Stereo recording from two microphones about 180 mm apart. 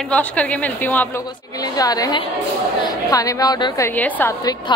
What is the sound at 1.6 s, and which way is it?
A woman's voice, 20° left (ahead or behind).